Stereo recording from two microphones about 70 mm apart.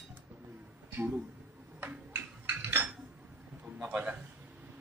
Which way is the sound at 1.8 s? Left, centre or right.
Right.